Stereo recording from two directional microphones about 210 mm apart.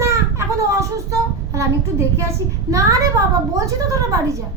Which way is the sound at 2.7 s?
15° right (ahead or behind).